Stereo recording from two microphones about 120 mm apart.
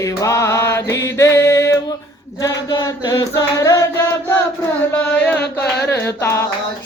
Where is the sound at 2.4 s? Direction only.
30° left (ahead or behind).